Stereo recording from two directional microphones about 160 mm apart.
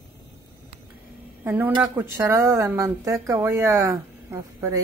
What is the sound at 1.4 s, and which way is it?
Speech, 10° right (ahead or behind).